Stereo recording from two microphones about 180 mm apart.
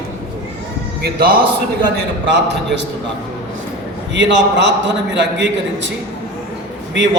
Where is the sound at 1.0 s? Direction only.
55° right (ahead or behind).